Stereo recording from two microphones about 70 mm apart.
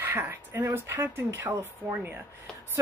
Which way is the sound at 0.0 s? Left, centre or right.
Right.